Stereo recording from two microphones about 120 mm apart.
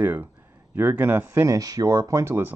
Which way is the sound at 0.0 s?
15° right (ahead or behind).